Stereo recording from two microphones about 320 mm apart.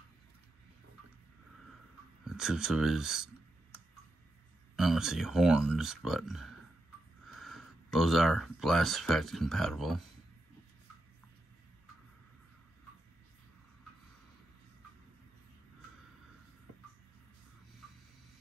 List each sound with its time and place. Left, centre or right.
2.2 s speech: centre
4.7 s speech: centre